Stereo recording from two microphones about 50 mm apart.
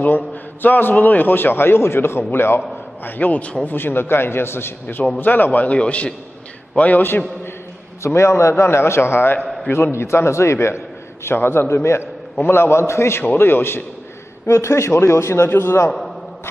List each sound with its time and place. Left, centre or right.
0.0 s a man's voice: left
3.0 s a man's voice: left
3.6 s a man's voice: left
5.2 s a man's voice: left
8.0 s a man's voice: left
11.2 s a man's voice: left
11.7 s a man's voice: left
13.4 s a man's voice: left
14.4 s a man's voice: left